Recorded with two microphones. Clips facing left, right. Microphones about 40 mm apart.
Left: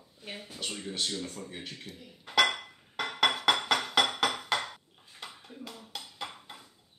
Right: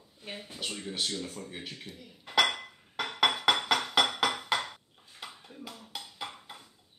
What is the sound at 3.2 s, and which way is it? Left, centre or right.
Music, centre.